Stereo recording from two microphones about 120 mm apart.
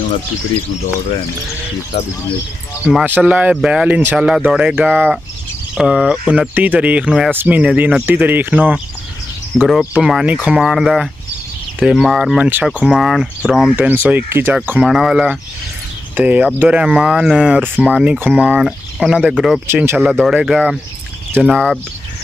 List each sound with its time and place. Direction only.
1.9 s speech: 55° left (ahead or behind)
2.8 s speech: 5° right (ahead or behind)
13.7 s speech: 15° right (ahead or behind)
14.8 s speech: 5° right (ahead or behind)
19.7 s speech: 20° right (ahead or behind)
20.0 s speech: 5° right (ahead or behind)